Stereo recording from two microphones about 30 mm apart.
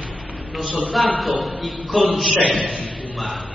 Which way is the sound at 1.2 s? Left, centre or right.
Centre.